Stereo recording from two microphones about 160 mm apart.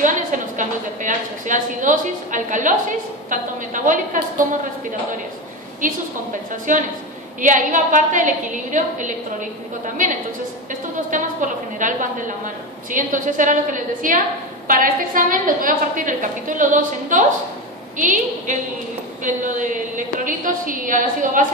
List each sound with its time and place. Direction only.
0.0 s a woman's voice: 55° right (ahead or behind)
6.5 s a woman's voice: 55° right (ahead or behind)
10.7 s a woman's voice: 55° right (ahead or behind)